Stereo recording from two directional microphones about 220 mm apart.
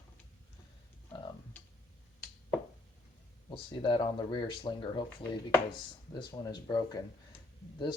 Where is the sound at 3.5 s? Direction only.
20° left (ahead or behind).